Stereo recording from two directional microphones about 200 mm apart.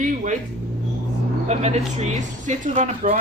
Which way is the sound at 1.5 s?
35° right (ahead or behind).